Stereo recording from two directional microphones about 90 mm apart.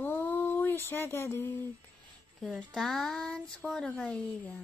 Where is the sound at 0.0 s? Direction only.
20° left (ahead or behind).